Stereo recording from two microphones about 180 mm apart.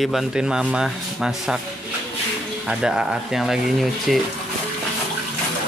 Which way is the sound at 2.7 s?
5° right (ahead or behind).